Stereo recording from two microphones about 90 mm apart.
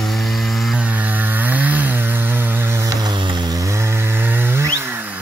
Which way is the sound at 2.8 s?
50° right (ahead or behind).